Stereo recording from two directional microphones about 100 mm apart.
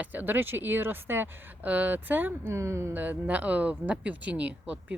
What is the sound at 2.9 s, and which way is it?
Speech, 15° right (ahead or behind).